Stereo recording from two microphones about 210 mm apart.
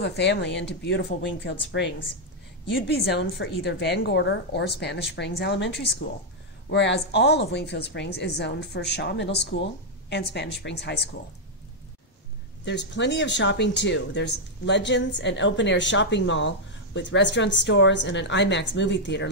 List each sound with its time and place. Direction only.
0.0 s speech: 55° left (ahead or behind)
3.1 s a woman's voice: 55° left (ahead or behind)
12.6 s speech: 55° left (ahead or behind)